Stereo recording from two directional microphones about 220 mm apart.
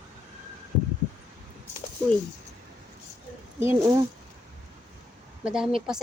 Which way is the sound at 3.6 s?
15° right (ahead or behind).